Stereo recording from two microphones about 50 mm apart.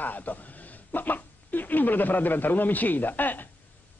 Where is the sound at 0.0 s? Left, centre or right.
Left.